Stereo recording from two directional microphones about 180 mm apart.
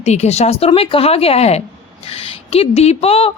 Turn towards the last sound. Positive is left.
turn(degrees=30)  # may be behind; listen again after turning